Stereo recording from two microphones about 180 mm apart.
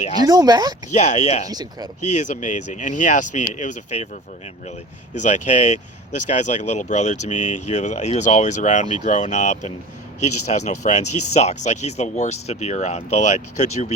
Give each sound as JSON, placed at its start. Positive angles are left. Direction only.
{"t": 0.2, "sound": "speech", "side_deg": -20}
{"t": 0.9, "sound": "speech", "side_deg": 40}
{"t": 1.5, "sound": "speech", "side_deg": -20}
{"t": 2.1, "sound": "speech", "side_deg": 45}
{"t": 5.2, "sound": "speech", "side_deg": 40}